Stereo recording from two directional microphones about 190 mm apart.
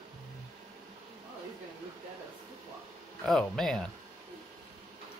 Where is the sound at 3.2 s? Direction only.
5° left (ahead or behind).